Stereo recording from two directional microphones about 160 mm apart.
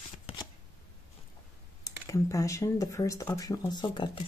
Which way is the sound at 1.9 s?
20° left (ahead or behind).